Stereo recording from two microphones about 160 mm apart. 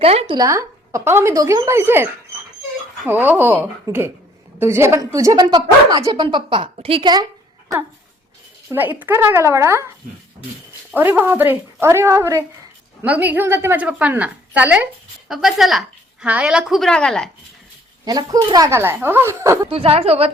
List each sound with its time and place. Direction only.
0.0 s a woman's voice: 40° right (ahead or behind)
0.3 s a woman's voice: 20° right (ahead or behind)
3.1 s a woman's voice: 10° right (ahead or behind)
8.7 s a woman's voice: 10° right (ahead or behind)
10.9 s a woman's voice: 10° right (ahead or behind); by 17.2 s 5° left (ahead or behind)
18.0 s a woman's voice: 25° right (ahead or behind)
19.7 s a woman's voice: 35° right (ahead or behind)